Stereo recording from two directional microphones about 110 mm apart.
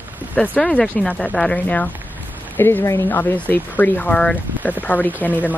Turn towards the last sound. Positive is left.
turn(degrees=15)  # may be behind; listen again after turning